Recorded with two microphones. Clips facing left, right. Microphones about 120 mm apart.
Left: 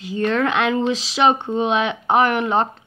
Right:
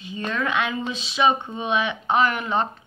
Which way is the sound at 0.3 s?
70° left (ahead or behind).